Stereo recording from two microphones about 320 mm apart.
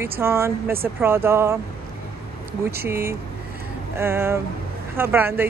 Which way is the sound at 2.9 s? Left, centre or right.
Centre.